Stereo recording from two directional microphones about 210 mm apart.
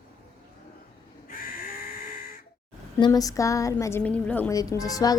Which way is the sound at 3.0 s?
15° left (ahead or behind).